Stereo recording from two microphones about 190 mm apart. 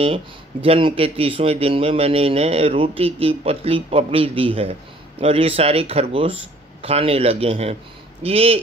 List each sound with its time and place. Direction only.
0.0 s speech: 30° right (ahead or behind)